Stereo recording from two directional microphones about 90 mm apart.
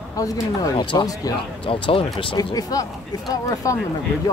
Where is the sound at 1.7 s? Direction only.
80° left.